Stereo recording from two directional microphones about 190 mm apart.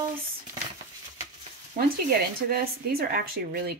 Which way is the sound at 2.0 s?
50° right (ahead or behind).